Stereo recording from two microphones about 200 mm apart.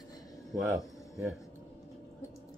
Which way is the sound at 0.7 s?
Centre (ahead or behind).